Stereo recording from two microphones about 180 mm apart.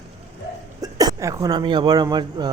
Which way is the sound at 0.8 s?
20° right (ahead or behind).